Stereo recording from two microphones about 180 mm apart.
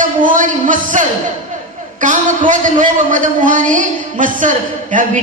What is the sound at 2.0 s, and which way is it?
A man's voice, 45° right (ahead or behind).